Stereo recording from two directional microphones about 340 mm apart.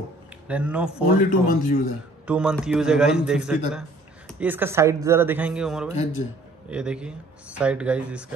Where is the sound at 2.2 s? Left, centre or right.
Centre.